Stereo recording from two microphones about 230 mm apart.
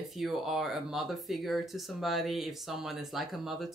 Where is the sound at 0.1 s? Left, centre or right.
Centre.